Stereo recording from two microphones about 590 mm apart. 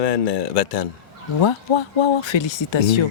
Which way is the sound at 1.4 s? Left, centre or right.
Left.